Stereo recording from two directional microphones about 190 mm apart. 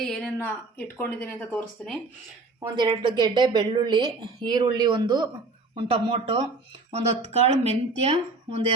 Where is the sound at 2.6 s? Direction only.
20° right (ahead or behind).